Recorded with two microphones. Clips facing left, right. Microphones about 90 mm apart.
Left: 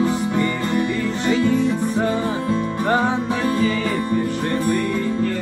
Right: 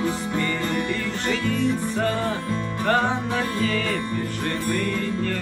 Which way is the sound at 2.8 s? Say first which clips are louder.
Left 1 dB; 15° left (ahead or behind).